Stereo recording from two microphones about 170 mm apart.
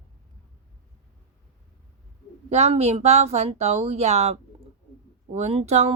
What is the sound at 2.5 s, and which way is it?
Speech, 40° right (ahead or behind).